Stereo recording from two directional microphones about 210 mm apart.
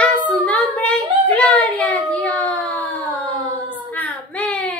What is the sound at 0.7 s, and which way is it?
Child singing, 5° left (ahead or behind).